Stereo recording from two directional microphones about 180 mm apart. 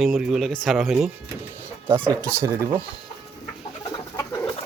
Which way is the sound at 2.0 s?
15° right (ahead or behind).